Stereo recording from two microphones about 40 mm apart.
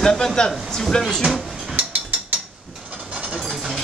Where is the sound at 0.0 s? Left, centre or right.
Centre.